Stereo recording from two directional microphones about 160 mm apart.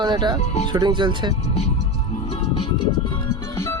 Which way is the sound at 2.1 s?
40° left (ahead or behind).